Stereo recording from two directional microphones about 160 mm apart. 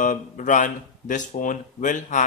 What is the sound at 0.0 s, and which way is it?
Speech, 55° left (ahead or behind).